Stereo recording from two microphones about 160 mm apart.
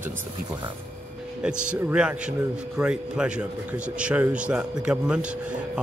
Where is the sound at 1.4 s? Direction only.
5° right (ahead or behind).